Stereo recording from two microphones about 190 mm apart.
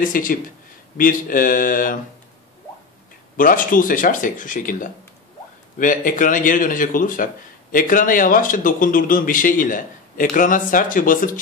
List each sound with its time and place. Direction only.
0.0 s speech: 45° left (ahead or behind)
3.3 s speech: 45° left (ahead or behind)